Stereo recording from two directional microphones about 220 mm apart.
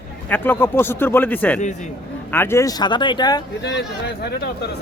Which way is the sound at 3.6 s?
50° left (ahead or behind).